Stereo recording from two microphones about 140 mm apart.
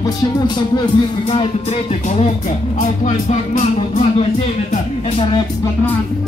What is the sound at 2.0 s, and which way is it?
Music, 50° left (ahead or behind).